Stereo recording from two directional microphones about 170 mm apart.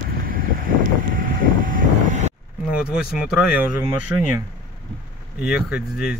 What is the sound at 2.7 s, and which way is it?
Speech, 5° right (ahead or behind).